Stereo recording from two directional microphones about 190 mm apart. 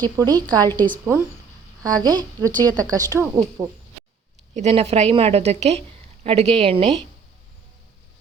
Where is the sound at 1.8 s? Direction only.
20° right (ahead or behind).